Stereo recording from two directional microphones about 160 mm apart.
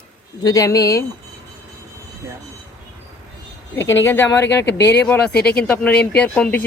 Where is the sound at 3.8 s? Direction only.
15° left (ahead or behind).